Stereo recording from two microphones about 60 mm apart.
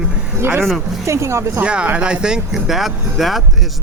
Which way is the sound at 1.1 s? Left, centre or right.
Right.